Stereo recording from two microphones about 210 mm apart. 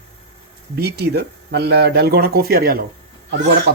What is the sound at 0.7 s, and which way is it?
A man's voice, 50° right (ahead or behind).